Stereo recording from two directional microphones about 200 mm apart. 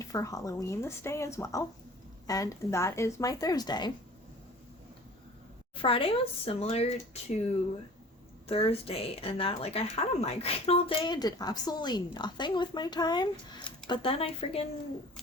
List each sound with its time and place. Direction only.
0.0 s speech: 15° left (ahead or behind)
5.7 s speech: 25° left (ahead or behind)
8.4 s speech: 30° left (ahead or behind)